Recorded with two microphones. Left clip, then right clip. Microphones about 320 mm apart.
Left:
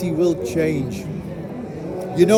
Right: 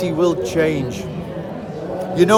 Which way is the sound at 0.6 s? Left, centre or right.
Right.